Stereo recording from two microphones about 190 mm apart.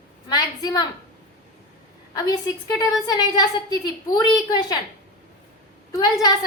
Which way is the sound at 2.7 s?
20° left (ahead or behind).